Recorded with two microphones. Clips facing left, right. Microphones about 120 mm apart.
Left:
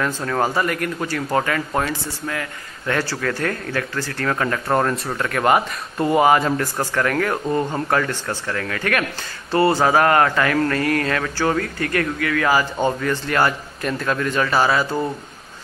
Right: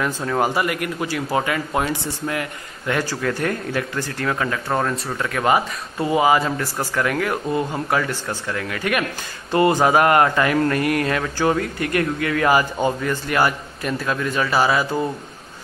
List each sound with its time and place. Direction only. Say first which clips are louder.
0.0 s speech: even; 10° right (ahead or behind)